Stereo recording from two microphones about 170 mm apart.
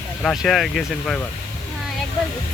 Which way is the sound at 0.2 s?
5° left (ahead or behind).